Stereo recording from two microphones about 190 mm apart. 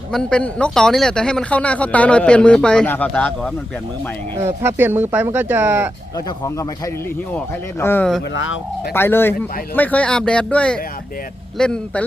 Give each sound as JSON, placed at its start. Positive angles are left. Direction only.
{"t": 0.1, "sound": "speech", "side_deg": 5}
{"t": 4.4, "sound": "speech", "side_deg": -15}
{"t": 6.1, "sound": "a man's voice", "side_deg": 20}
{"t": 8.3, "sound": "speech", "side_deg": 90}
{"t": 8.9, "sound": "a man's voice", "side_deg": 10}